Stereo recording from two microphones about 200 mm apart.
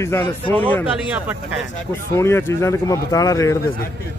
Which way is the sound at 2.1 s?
15° left (ahead or behind).